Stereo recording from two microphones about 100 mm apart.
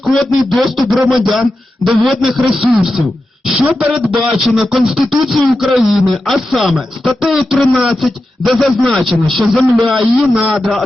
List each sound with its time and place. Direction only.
0.3 s a man's voice: centre (ahead or behind)